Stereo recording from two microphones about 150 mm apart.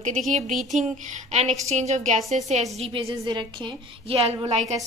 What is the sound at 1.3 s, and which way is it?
A woman's voice, 50° right (ahead or behind).